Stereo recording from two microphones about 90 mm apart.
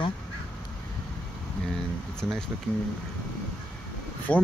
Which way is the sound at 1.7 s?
5° left (ahead or behind).